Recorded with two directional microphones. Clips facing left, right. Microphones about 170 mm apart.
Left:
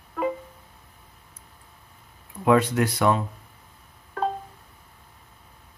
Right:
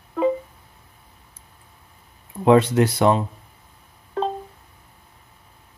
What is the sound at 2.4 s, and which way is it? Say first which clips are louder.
Speech: right 5 dB; 25° right (ahead or behind).